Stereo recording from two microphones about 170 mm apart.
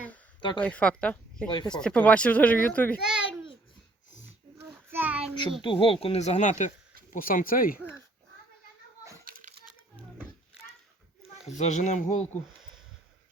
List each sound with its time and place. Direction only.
0.6 s speech: 5° left (ahead or behind)
3.0 s a child's voice: 5° right (ahead or behind)
4.9 s child singing: 10° right (ahead or behind)
5.6 s speech: 30° left (ahead or behind); by 7.8 s 55° left (ahead or behind)
9.2 s children playing: 50° right (ahead or behind)
11.2 s speech: 40° left (ahead or behind)